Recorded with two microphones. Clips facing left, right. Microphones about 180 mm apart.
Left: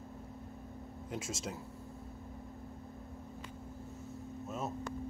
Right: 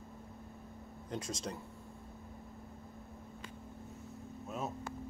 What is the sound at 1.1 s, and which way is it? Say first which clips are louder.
Speech: right 1 dB; 5° left (ahead or behind).